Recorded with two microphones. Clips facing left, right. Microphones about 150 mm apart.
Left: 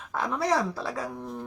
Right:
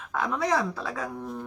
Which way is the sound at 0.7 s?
30° left (ahead or behind).